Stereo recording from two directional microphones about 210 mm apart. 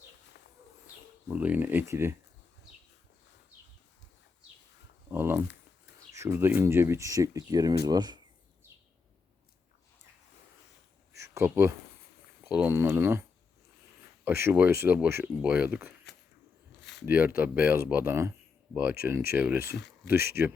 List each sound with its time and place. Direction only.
1.3 s speech: 5° right (ahead or behind)
5.0 s a sound: 10° right (ahead or behind)
6.1 s speech: 10° right (ahead or behind)
11.1 s a sound: 15° right (ahead or behind)
12.4 s speech: 5° right (ahead or behind)
14.3 s speech: 10° right (ahead or behind)
17.1 s speech: 10° right (ahead or behind)